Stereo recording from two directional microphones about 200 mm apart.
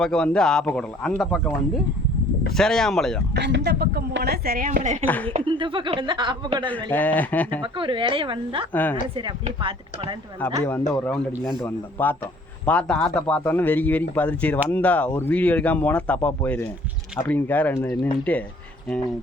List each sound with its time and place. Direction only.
0.0 s speech: 5° left (ahead or behind)
3.3 s a woman's voice: 60° right (ahead or behind); by 5.0 s 35° right (ahead or behind)
5.0 s speech: 10° left (ahead or behind)
5.3 s speech: 25° right (ahead or behind)
6.9 s speech: 10° left (ahead or behind)
7.6 s speech: 25° right (ahead or behind)
8.7 s speech: 10° left (ahead or behind)
9.6 s speech: 25° right (ahead or behind)
10.7 s speech: 10° left (ahead or behind)